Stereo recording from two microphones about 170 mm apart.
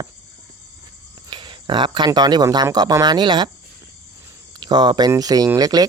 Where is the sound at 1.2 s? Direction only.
30° right (ahead or behind).